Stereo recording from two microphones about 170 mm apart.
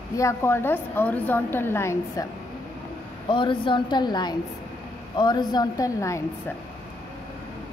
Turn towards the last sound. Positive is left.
turn(degrees=20)  # may be behind; listen again after turning